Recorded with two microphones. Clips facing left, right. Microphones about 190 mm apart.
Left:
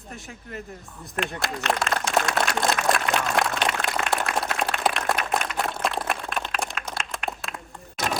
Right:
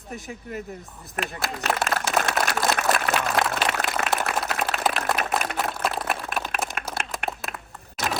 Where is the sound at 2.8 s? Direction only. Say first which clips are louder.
Even; centre (ahead or behind).